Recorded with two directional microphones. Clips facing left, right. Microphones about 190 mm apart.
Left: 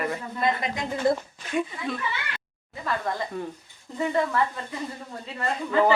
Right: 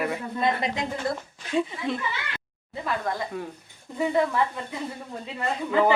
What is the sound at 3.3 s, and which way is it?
Speech, 5° right (ahead or behind).